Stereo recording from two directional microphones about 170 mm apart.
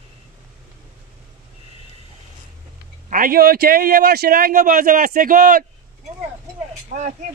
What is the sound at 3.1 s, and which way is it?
A man's voice, 55° right (ahead or behind).